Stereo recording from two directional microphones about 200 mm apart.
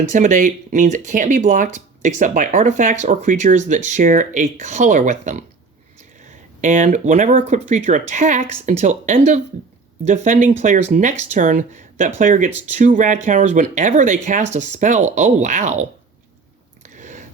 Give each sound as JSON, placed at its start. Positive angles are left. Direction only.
{"t": 0.1, "sound": "speech", "side_deg": -40}
{"t": 6.6, "sound": "speech", "side_deg": -40}
{"t": 16.8, "sound": "a sound", "side_deg": -40}